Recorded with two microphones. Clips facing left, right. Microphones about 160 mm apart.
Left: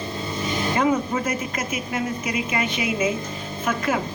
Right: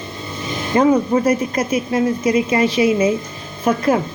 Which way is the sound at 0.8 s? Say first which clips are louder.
Right 9 dB; 35° right (ahead or behind).